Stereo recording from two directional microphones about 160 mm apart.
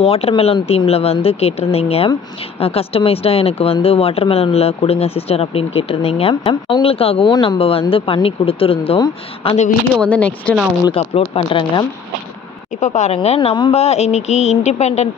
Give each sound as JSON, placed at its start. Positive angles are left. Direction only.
{"t": 0.0, "sound": "speech", "side_deg": 40}
{"t": 9.9, "sound": "speech", "side_deg": 10}
{"t": 10.9, "sound": "speech", "side_deg": 35}
{"t": 12.8, "sound": "speech", "side_deg": 50}